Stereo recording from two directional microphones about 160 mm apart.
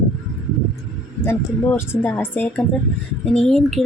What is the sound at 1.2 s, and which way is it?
Speech, 15° left (ahead or behind).